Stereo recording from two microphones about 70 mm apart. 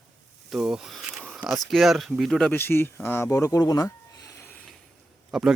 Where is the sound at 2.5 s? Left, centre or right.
Left.